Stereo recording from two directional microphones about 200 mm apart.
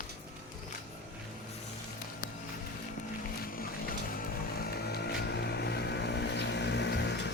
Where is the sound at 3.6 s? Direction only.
45° left (ahead or behind).